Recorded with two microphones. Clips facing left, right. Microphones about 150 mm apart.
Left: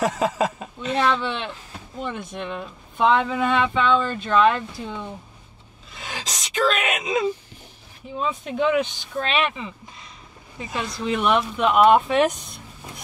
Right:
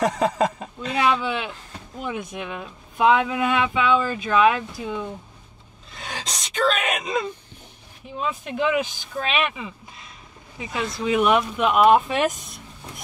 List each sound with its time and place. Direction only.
0.0 s speech: 5° left (ahead or behind)